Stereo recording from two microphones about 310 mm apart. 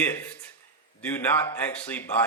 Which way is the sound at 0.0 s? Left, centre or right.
Centre.